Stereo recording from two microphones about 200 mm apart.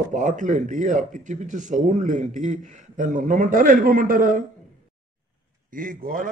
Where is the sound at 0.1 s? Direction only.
40° right (ahead or behind).